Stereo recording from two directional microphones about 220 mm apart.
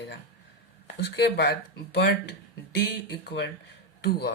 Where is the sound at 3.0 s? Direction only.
50° left (ahead or behind).